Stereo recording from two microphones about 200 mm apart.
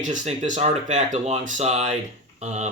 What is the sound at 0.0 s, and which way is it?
Speech, 40° right (ahead or behind).